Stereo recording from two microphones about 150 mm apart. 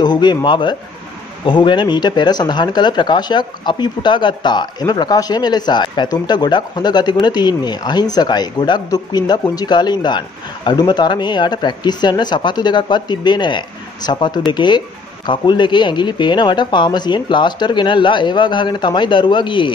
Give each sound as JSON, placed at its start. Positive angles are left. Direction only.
{"t": 0.0, "sound": "speech", "side_deg": 30}